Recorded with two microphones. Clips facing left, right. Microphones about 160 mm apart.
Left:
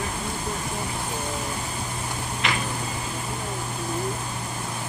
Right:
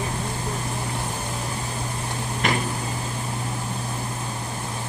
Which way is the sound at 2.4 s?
45° right (ahead or behind).